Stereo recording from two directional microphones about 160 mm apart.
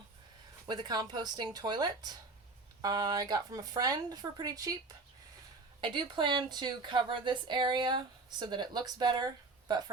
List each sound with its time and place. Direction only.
0.7 s a woman's voice: 25° right (ahead or behind)
5.8 s a woman's voice: 30° right (ahead or behind)